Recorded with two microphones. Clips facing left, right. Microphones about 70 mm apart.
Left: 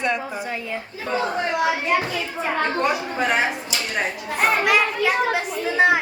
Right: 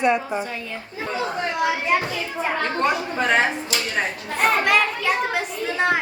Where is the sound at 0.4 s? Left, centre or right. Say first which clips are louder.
Left 3 dB; centre.